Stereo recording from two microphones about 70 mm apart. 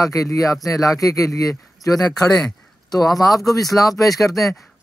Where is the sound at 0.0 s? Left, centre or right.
Left.